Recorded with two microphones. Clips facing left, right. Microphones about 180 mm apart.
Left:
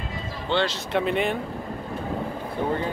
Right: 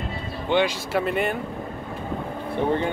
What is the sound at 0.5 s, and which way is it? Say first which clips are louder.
Speech: right 3 dB; 15° right (ahead or behind).